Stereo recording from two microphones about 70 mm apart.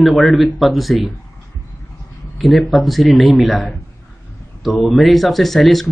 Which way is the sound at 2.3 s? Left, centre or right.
Centre.